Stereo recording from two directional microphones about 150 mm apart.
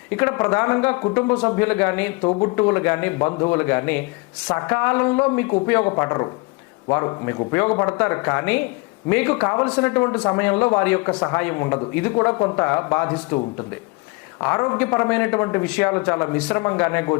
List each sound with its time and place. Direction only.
0.1 s speech: 15° left (ahead or behind)
2.2 s speech: 30° left (ahead or behind)
2.6 s speech: 15° left (ahead or behind)